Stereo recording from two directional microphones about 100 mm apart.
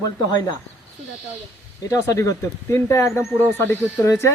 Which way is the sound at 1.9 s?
30° left (ahead or behind).